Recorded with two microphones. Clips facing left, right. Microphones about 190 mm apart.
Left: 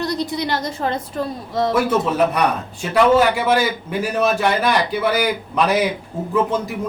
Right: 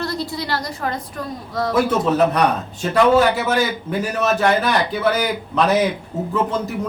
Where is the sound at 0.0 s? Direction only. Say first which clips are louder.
Left 3 dB; 20° left (ahead or behind).